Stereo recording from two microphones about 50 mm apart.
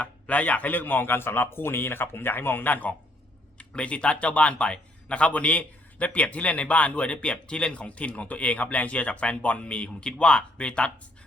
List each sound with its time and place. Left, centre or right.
0.0 s speech: left
3.6 s speech: left